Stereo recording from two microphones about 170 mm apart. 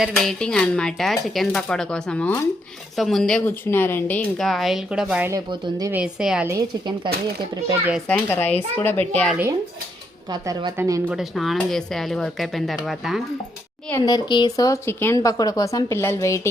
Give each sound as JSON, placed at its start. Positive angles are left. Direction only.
{"t": 0.0, "sound": "speech", "side_deg": 0}
{"t": 5.3, "sound": "speech", "side_deg": -25}
{"t": 5.9, "sound": "speech", "side_deg": -5}
{"t": 6.5, "sound": "speech", "side_deg": -25}
{"t": 8.0, "sound": "a child's voice", "side_deg": 10}
{"t": 10.4, "sound": "speech", "side_deg": -20}
{"t": 11.1, "sound": "speech", "side_deg": 0}
{"t": 13.9, "sound": "speech", "side_deg": 25}